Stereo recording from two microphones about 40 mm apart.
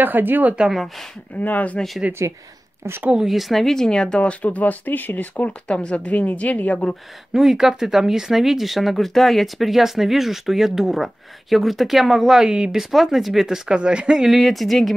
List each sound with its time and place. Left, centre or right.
0.0 s a woman's voice: right
1.3 s speech: left
3.3 s speech: centre
4.2 s speech: left
5.7 s speech: left
7.3 s speech: centre
12.4 s speech: right
12.7 s speech: centre
13.7 s speech: right
14.3 s speech: centre